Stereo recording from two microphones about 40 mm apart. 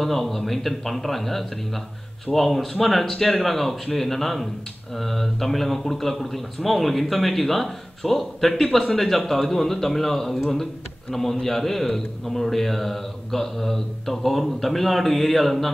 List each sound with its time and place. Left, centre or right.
0.0 s a man's voice: centre